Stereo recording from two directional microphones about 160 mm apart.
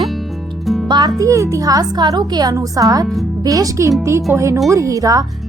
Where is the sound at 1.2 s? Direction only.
20° right (ahead or behind).